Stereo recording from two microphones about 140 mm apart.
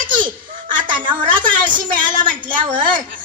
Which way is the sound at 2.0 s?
70° right (ahead or behind).